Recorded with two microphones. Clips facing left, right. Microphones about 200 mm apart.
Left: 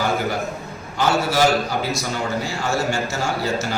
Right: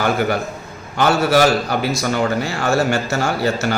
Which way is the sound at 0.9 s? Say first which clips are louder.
Right 4 dB; 65° right (ahead or behind).